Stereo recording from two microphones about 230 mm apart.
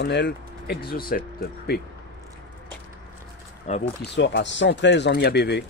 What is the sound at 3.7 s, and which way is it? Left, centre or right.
Speech, left.